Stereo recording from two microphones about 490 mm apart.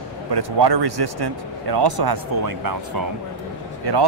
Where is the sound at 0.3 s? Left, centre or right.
Right.